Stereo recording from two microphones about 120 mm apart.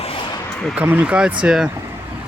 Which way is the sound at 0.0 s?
50° left (ahead or behind).